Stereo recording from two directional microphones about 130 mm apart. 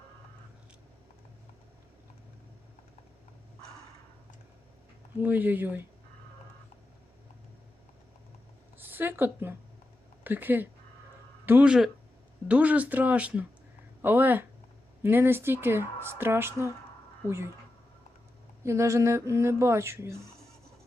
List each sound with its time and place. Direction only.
5.2 s speech: 15° right (ahead or behind)
8.8 s speech: 15° right (ahead or behind)
18.6 s speech: 20° right (ahead or behind)